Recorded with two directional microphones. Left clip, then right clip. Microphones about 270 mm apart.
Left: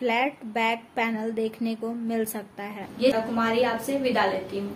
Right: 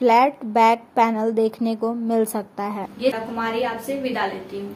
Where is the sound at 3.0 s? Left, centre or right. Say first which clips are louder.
Left 1 dB; centre.